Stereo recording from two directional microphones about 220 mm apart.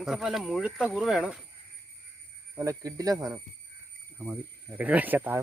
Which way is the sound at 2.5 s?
15° right (ahead or behind).